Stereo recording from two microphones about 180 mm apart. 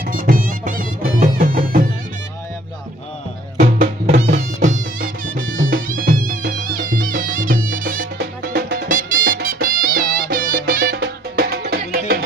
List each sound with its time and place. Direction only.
0.0 s music: 50° right (ahead or behind)
3.8 s music: 60° right (ahead or behind)
4.4 s music: 45° right (ahead or behind); by 12.2 s 60° right (ahead or behind)